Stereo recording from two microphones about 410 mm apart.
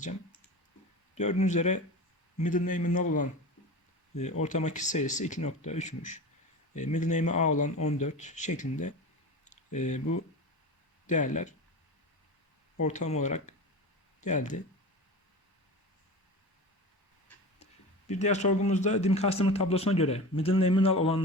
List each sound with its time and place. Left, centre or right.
1.1 s speech: centre
4.4 s speech: centre
9.4 s a sound: centre
11.0 s speech: centre
12.8 s speech: centre
18.1 s speech: centre